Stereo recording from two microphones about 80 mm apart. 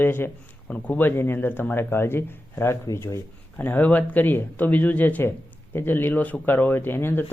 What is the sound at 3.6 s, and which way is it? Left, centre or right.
Speech, left.